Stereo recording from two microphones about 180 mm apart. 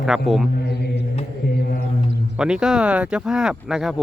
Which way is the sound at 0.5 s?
65° left (ahead or behind).